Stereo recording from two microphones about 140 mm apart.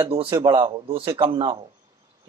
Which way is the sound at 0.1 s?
40° right (ahead or behind).